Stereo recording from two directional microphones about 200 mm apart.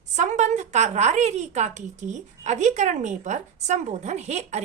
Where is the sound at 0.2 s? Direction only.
35° right (ahead or behind).